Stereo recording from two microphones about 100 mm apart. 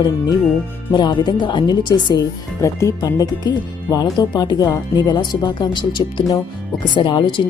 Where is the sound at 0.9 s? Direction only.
50° left (ahead or behind).